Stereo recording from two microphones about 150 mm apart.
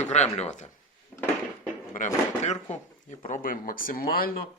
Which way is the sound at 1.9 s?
55° left (ahead or behind).